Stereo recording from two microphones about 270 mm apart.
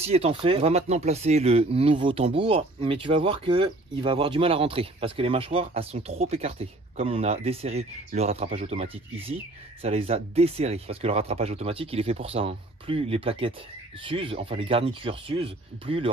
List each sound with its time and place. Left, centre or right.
0.0 s speech: right